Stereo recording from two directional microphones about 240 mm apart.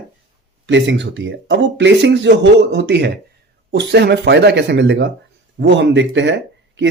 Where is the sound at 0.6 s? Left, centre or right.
Right.